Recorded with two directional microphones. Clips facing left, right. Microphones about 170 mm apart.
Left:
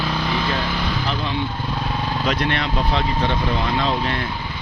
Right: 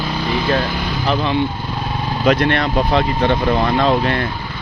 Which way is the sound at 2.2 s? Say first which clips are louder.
Right 9 dB; 60° right (ahead or behind).